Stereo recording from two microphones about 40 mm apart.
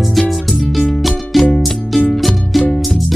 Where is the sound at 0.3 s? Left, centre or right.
Centre.